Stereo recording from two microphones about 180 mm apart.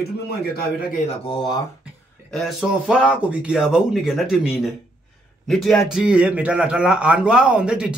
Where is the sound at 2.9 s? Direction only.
5° right (ahead or behind).